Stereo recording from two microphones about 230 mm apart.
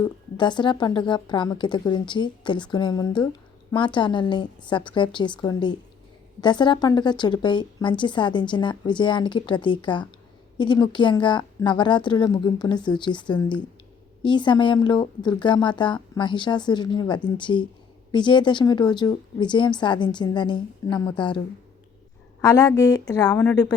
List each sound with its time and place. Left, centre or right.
0.0 s a woman's voice: centre